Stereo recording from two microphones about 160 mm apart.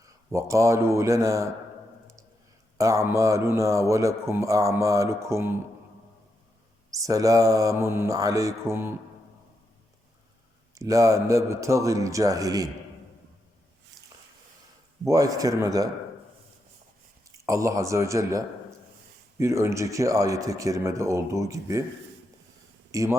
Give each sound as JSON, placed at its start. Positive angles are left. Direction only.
{"t": 0.0, "sound": "speech", "side_deg": -20}
{"t": 2.7, "sound": "a man's voice", "side_deg": -20}
{"t": 6.9, "sound": "a man's voice", "side_deg": -20}
{"t": 10.8, "sound": "a man's voice", "side_deg": -20}
{"t": 14.0, "sound": "a sound", "side_deg": 0}
{"t": 15.0, "sound": "a man's voice", "side_deg": -20}
{"t": 17.4, "sound": "a man's voice", "side_deg": -20}
{"t": 22.9, "sound": "speech", "side_deg": -20}